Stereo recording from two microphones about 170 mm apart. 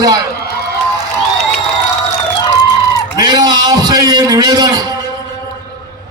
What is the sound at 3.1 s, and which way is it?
A man's voice, 25° right (ahead or behind).